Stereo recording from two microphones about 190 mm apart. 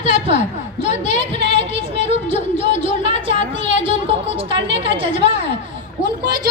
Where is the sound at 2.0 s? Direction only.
35° left (ahead or behind).